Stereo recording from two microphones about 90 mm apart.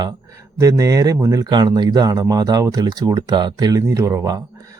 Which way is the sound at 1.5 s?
55° right (ahead or behind).